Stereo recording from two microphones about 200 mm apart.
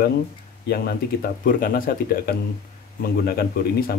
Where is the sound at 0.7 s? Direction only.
50° left (ahead or behind).